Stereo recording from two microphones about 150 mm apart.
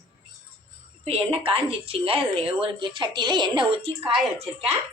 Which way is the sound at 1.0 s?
40° right (ahead or behind).